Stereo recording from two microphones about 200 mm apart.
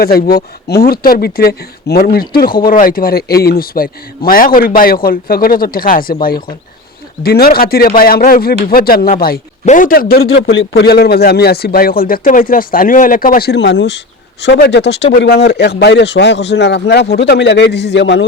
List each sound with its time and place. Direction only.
0.0 s speech: 50° left (ahead or behind)
10.4 s a man's voice: 60° left (ahead or behind)